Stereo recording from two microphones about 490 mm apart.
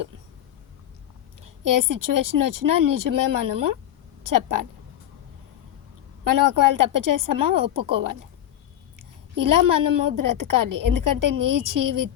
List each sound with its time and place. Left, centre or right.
1.6 s a woman's voice: right
6.2 s a woman's voice: right
9.3 s a woman's voice: right